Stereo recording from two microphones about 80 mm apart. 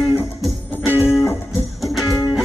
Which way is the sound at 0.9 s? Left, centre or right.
Left.